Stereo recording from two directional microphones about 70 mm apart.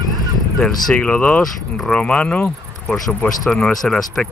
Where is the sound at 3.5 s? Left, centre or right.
Centre.